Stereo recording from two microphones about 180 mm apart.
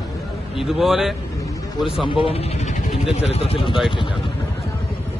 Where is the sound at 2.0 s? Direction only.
30° left (ahead or behind).